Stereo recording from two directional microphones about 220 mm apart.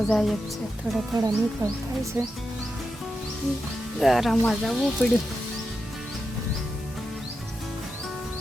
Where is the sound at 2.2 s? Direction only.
10° right (ahead or behind).